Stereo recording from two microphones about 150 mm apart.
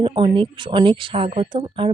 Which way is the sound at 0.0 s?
35° right (ahead or behind).